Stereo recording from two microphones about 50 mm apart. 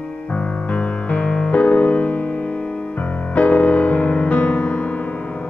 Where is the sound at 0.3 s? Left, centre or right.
Left.